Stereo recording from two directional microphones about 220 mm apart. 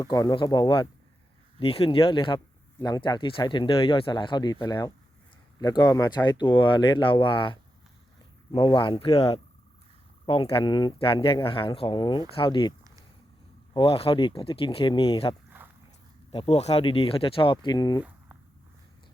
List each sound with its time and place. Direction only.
0.0 s speech: 15° left (ahead or behind)
13.7 s speech: 25° left (ahead or behind)
15.4 s a sound: 10° right (ahead or behind)
16.3 s speech: 25° left (ahead or behind)